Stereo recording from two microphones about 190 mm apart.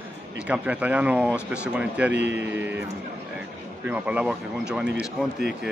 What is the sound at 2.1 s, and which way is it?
Speech, 65° right (ahead or behind).